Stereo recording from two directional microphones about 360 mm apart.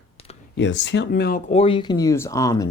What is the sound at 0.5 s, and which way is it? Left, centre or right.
Speech, left.